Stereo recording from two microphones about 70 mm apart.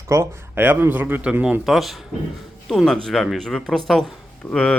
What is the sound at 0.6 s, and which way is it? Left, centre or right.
Speech, right.